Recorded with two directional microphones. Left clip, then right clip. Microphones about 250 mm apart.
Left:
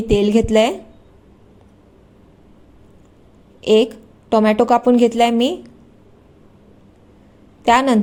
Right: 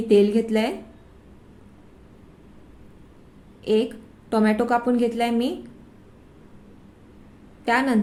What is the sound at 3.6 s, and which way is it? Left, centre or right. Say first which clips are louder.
A woman's voice: left 8 dB; left.